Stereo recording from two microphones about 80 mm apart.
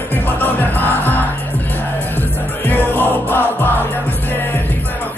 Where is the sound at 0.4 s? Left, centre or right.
Left.